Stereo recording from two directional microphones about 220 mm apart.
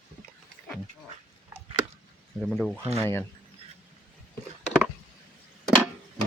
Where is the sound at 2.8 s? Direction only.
30° right (ahead or behind).